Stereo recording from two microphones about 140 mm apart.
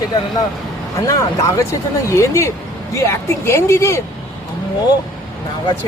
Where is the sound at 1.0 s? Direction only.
25° left (ahead or behind).